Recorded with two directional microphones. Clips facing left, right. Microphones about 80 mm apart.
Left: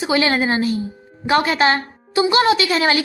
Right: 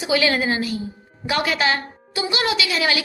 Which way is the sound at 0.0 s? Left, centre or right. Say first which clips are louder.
Left 2 dB; left.